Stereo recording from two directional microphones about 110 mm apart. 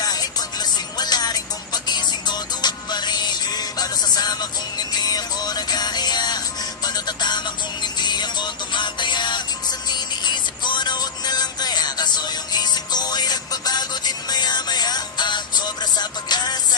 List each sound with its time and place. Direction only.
0.0 s music: 40° left (ahead or behind)